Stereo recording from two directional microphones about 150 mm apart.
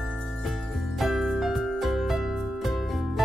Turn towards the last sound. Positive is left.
turn(degrees=0)  # may be behind; listen again after turning